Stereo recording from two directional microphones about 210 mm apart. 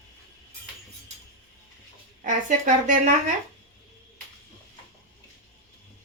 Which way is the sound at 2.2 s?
35° right (ahead or behind).